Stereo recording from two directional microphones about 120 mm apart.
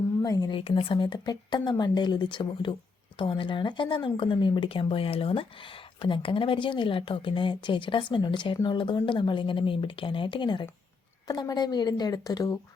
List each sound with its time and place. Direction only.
0.2 s speech: 30° left (ahead or behind)
0.5 s a woman's voice: 50° left (ahead or behind); by 12.5 s 30° left (ahead or behind)